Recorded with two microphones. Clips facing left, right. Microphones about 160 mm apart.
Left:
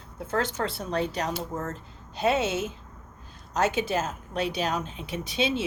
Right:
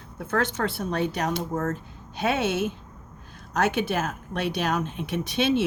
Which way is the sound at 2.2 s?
65° right (ahead or behind).